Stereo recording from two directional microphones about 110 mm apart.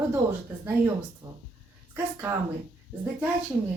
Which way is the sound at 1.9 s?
25° right (ahead or behind).